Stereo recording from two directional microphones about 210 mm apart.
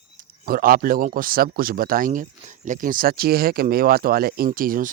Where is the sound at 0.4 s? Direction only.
45° right (ahead or behind).